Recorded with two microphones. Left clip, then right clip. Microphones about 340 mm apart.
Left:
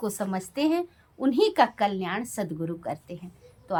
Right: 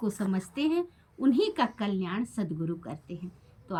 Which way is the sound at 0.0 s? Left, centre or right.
Centre.